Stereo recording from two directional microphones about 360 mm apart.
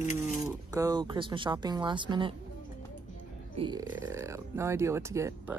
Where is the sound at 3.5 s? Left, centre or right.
Centre.